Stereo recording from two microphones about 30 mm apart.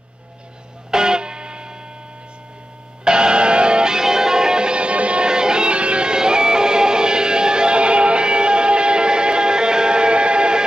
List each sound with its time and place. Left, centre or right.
0.9 s music: right
3.0 s music: right
5.2 s music: right
6.1 s music: right